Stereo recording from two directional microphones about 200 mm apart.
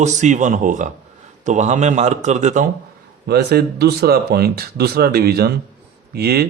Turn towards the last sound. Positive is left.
turn(degrees=-50)  # may be behind; listen again after turning